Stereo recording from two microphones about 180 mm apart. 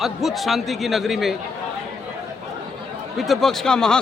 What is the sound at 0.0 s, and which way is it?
A man's voice, centre (ahead or behind).